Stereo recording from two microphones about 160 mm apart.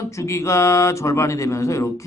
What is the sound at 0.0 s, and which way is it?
A man's voice, 20° left (ahead or behind).